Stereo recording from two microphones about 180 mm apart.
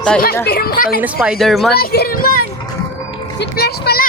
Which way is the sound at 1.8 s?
60° left (ahead or behind).